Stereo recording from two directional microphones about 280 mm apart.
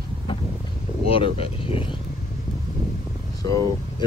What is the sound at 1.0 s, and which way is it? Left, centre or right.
Speech, centre.